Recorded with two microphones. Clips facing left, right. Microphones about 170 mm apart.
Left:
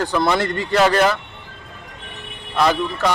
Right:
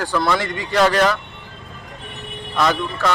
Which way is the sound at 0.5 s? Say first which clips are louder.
Left 3 dB; 15° right (ahead or behind).